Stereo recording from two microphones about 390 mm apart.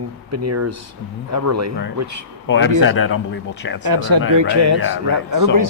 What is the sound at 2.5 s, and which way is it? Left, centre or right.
Speech, left.